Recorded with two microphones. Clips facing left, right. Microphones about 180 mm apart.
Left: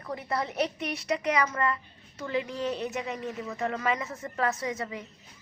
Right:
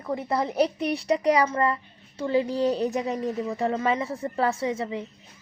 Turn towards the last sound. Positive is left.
turn(degrees=-25)  # may be behind; listen again after turning